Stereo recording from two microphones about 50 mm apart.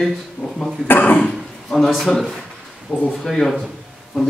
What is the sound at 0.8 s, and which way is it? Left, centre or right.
Speech, left.